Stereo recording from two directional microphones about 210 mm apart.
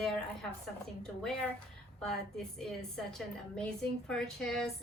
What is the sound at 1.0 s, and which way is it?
A woman's voice, 5° left (ahead or behind).